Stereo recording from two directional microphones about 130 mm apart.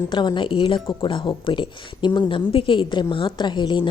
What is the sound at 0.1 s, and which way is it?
A woman's voice, 35° left (ahead or behind).